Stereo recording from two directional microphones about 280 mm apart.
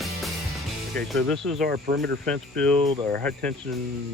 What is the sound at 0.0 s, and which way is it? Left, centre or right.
Music, centre.